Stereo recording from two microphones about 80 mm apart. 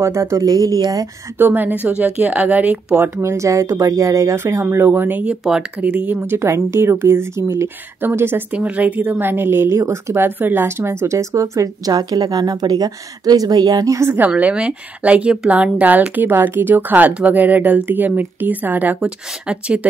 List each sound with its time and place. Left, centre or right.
0.0 s speech: right
0.5 s speech: right
1.4 s speech: right
3.0 s speech: right
4.8 s speech: right
5.4 s speech: centre
5.8 s speech: right
6.2 s speech: right
8.5 s speech: centre; by 14.0 s right
14.0 s speech: right
14.3 s speech: centre